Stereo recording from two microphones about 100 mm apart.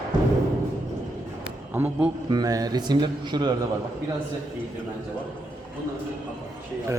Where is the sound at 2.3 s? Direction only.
40° right (ahead or behind).